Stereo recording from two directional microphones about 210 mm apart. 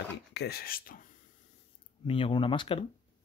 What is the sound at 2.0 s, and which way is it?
Speech, 25° left (ahead or behind).